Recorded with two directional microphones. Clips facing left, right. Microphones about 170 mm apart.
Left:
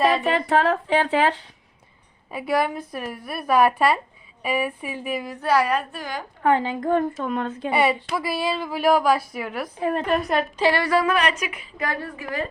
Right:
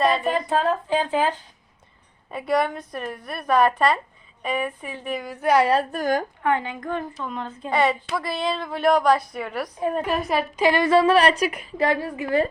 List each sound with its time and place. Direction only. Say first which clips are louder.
0.1 s speech: left 2 dB; 75° left (ahead or behind)
2.3 s a woman's voice: even; 5° left (ahead or behind)
5.4 s speech: right 2 dB; 20° right (ahead or behind)
5.9 s a woman's voice: right 9 dB; 45° right (ahead or behind)
6.4 s a woman's voice: left 3 dB; 35° left (ahead or behind)
7.2 s speech: left 5 dB; 60° left (ahead or behind)
7.7 s a woman's voice: even; 10° left (ahead or behind)
10.6 s a woman's voice: right 4 dB; 20° right (ahead or behind); by 11.7 s 40° right (ahead or behind)
11.8 s a woman's voice: right 6 dB; 25° right (ahead or behind)